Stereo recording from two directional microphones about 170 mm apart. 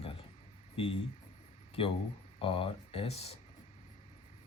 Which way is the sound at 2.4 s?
30° left (ahead or behind).